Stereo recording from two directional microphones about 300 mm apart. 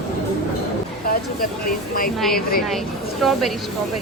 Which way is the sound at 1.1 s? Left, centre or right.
Left.